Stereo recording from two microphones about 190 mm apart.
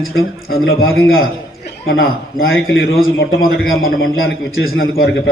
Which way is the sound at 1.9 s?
55° left (ahead or behind).